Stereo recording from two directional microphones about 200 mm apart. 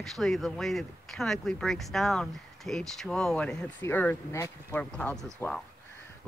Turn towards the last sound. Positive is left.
turn(degrees=5)  # may be behind; listen again after turning